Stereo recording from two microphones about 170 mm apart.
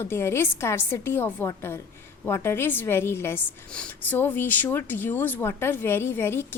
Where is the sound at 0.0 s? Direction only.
15° left (ahead or behind).